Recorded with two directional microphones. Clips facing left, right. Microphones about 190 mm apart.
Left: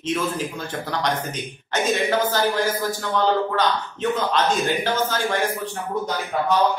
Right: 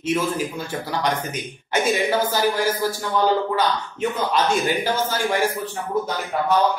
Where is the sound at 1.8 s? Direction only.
10° right (ahead or behind).